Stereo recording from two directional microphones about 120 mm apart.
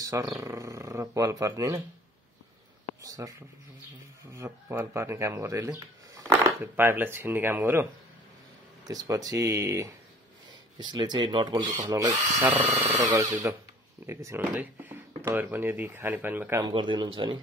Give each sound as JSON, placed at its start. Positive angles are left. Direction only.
{"t": 0.4, "sound": "speech", "side_deg": -25}
{"t": 3.0, "sound": "speech", "side_deg": -30}
{"t": 8.8, "sound": "speech", "side_deg": -30}
{"t": 10.8, "sound": "speech", "side_deg": -40}
{"t": 11.9, "sound": "speech", "side_deg": -30}
{"t": 16.6, "sound": "speech", "side_deg": -40}